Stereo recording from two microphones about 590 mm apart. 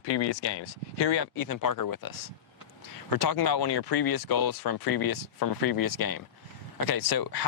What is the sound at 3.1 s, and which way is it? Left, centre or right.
Speech, left.